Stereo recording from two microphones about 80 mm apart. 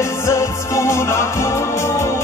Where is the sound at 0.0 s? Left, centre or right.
Left.